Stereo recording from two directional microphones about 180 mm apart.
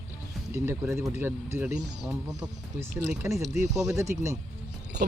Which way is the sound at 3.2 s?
15° right (ahead or behind).